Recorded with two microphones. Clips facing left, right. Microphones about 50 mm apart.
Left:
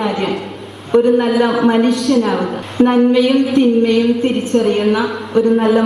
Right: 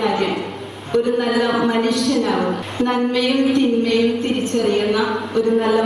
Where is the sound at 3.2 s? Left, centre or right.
Centre.